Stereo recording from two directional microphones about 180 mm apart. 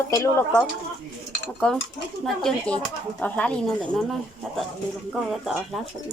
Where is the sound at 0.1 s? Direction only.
15° left (ahead or behind).